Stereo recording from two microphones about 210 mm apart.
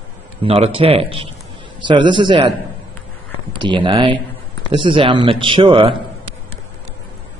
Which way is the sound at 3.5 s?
20° right (ahead or behind).